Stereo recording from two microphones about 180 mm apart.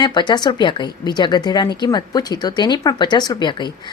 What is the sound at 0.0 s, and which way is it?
Speech, 25° left (ahead or behind).